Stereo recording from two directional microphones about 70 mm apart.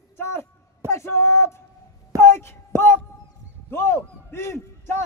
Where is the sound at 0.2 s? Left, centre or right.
Left.